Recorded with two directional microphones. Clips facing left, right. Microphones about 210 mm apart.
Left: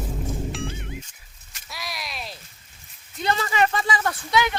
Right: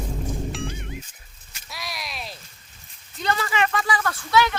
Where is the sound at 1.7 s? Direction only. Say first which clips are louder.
Even; centre (ahead or behind).